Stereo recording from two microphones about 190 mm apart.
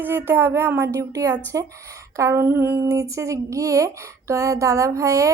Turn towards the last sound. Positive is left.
turn(degrees=-15)  # may be behind; listen again after turning